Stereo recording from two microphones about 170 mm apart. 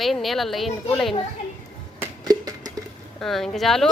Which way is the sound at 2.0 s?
20° right (ahead or behind).